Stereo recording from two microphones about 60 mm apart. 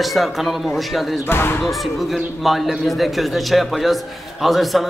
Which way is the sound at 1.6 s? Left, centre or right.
Centre.